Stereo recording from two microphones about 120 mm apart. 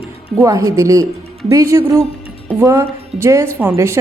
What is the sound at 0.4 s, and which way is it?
A woman's voice, 30° right (ahead or behind).